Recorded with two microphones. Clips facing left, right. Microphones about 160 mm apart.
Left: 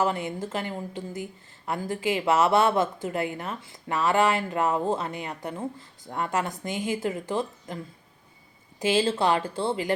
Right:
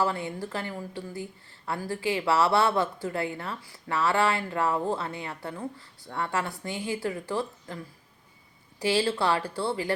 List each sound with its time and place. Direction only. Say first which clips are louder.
0.0 s a woman's voice: left 2 dB; 20° left (ahead or behind)